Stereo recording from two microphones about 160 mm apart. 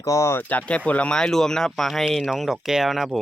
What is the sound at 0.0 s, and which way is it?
Speech, 20° left (ahead or behind).